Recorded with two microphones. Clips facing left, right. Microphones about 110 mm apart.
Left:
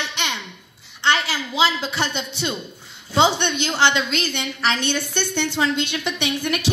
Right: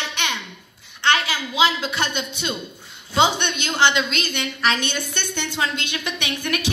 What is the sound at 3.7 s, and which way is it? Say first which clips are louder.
Speech: right 1 dB; 15° right (ahead or behind).